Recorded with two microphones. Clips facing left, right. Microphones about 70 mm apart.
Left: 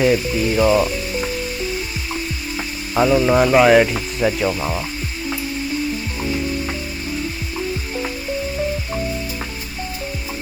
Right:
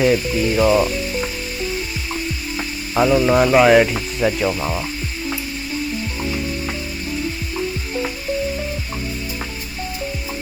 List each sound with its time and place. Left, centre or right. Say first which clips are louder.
0.0 s speech: even; centre
2.6 s speech: even; centre